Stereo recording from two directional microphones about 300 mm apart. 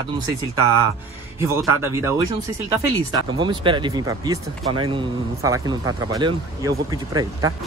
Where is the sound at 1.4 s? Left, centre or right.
Centre.